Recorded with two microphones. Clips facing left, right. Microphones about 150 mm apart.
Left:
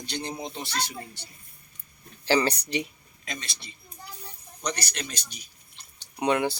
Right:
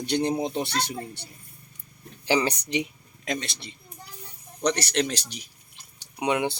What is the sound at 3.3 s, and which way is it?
Speech, 70° right (ahead or behind).